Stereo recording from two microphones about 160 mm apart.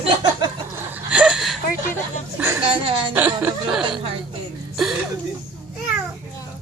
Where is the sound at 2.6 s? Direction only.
35° right (ahead or behind).